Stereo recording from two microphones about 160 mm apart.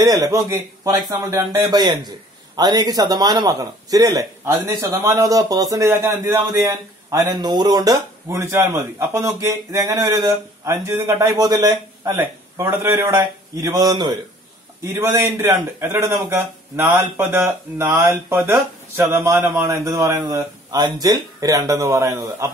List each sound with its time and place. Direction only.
0.0 s a man's voice: 20° right (ahead or behind)